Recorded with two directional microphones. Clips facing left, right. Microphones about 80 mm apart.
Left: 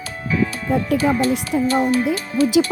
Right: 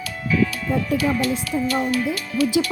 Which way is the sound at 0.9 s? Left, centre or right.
Left.